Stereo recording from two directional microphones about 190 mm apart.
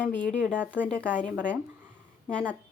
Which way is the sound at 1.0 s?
5° left (ahead or behind).